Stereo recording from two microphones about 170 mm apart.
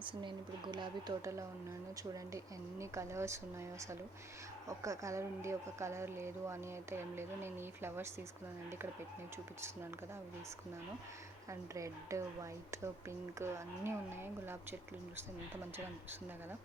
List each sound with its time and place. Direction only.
0.0 s a woman's voice: 30° right (ahead or behind)
11.7 s speech: 20° right (ahead or behind)